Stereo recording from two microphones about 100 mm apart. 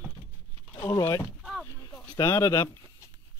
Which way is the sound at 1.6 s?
20° left (ahead or behind).